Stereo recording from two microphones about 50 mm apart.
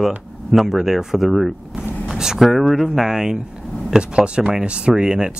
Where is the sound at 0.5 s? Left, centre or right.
Centre.